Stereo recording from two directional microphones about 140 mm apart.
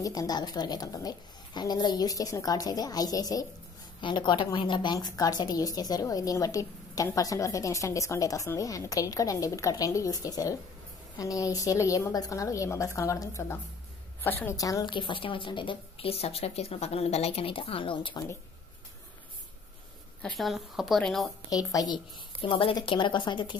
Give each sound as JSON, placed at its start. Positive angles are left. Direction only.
{"t": 0.0, "sound": "a woman's voice", "side_deg": 25}
{"t": 20.2, "sound": "a woman's voice", "side_deg": 5}
{"t": 21.5, "sound": "a woman's voice", "side_deg": 25}